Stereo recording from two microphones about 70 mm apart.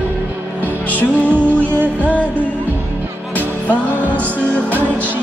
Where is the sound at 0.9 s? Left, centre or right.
Left.